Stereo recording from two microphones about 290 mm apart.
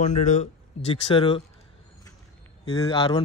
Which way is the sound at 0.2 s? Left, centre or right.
Left.